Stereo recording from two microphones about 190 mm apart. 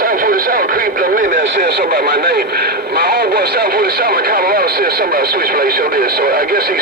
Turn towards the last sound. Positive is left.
turn(degrees=-50)  # may be behind; listen again after turning